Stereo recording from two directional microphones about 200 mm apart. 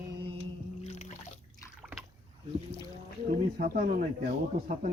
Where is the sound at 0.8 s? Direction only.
35° left (ahead or behind).